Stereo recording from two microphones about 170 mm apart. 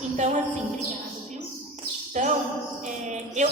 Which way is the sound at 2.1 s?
45° right (ahead or behind).